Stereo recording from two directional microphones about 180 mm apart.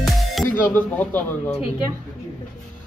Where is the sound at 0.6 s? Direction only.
10° left (ahead or behind).